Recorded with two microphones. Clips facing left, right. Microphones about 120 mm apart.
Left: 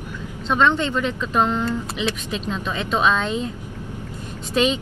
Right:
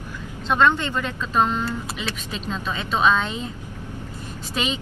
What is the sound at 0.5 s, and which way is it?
Speech, 10° right (ahead or behind).